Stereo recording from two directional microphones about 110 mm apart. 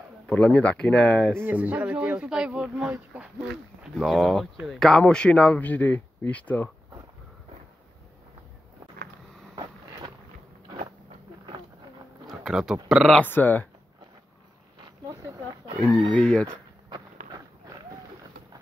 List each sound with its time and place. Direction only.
0.3 s speech: 10° left (ahead or behind)
1.4 s speech: 15° right (ahead or behind)
3.9 s speech: centre (ahead or behind)
9.6 s vehicle: 40° right (ahead or behind)
12.3 s a sound: 5° right (ahead or behind)
12.8 s speech: 5° right (ahead or behind)
13.2 s speech: 15° left (ahead or behind)
16.2 s speech: 10° left (ahead or behind)
16.9 s a sound: 35° right (ahead or behind)